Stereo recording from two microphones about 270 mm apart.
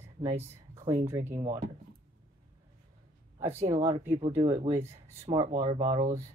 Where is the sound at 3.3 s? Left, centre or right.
Centre.